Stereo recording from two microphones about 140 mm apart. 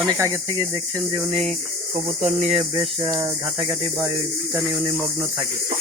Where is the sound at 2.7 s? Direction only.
25° right (ahead or behind).